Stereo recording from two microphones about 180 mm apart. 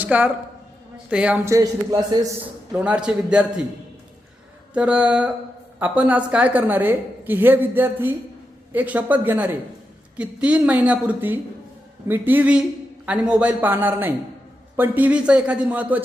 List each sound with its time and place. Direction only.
0.0 s a woman's voice: 10° right (ahead or behind)
2.7 s a man's voice: 5° right (ahead or behind)
4.7 s a woman's voice: 5° right (ahead or behind)